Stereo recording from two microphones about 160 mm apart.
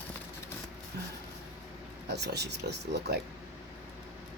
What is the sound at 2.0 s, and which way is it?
Speech, 90° right.